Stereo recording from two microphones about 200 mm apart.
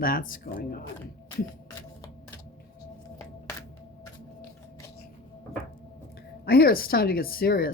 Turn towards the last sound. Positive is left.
turn(degrees=50)  # may be behind; listen again after turning